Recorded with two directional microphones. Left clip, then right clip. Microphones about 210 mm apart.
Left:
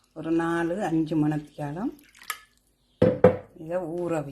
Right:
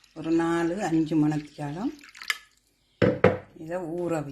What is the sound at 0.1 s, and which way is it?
Speech, centre (ahead or behind).